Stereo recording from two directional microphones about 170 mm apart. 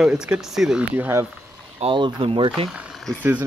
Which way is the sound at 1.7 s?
30° right (ahead or behind).